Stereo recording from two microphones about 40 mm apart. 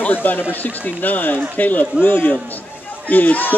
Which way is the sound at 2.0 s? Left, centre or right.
Left.